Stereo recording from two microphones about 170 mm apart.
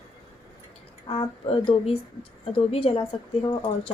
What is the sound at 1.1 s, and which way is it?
A woman's voice, 35° left (ahead or behind).